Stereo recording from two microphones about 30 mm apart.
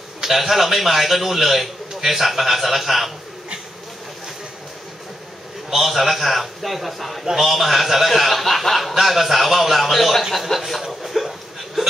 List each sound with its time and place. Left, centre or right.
0.2 s a man's voice: centre
5.7 s a man's voice: centre
10.4 s a sound: centre